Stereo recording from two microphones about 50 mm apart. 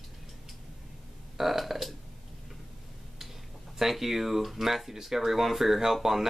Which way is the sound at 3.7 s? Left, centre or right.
Centre.